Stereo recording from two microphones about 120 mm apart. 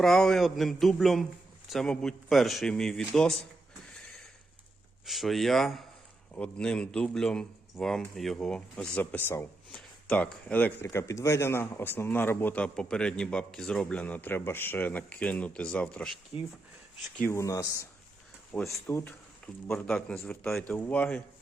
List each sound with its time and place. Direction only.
0.0 s a man's voice: 5° left (ahead or behind)
5.0 s a man's voice: centre (ahead or behind); by 9.5 s 20° left (ahead or behind)
9.7 s speech: 5° left (ahead or behind)
10.8 s speech: 25° left (ahead or behind); by 16.1 s 10° left (ahead or behind)
17.2 s speech: 25° left (ahead or behind)
18.5 s speech: 5° left (ahead or behind)
18.9 s speech: 20° left (ahead or behind)
19.6 s speech: 10° left (ahead or behind)